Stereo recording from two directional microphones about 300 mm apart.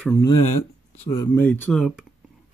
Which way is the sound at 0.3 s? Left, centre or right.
Left.